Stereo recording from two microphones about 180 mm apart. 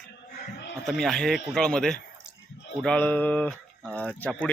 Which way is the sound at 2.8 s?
5° left (ahead or behind).